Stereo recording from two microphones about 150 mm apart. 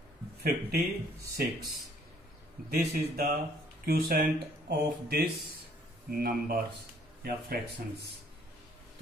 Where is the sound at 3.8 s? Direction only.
90° right; by 6.6 s 75° right (ahead or behind).